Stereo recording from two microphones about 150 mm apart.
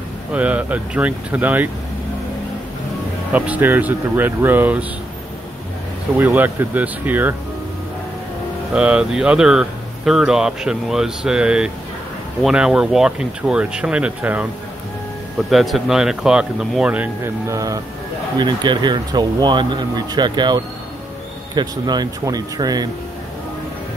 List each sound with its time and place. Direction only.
0.3 s speech: 10° right (ahead or behind)
3.3 s speech: 10° right (ahead or behind)
6.1 s speech: 10° right (ahead or behind)
8.7 s speech: 5° right (ahead or behind); by 22.8 s 25° right (ahead or behind)